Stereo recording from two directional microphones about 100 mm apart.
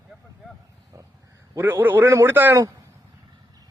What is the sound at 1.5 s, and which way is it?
A man's voice, 20° right (ahead or behind).